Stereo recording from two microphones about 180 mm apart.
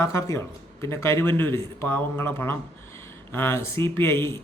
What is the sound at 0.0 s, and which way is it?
Speech, 15° left (ahead or behind).